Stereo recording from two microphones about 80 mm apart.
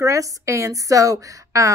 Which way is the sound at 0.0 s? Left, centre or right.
Right.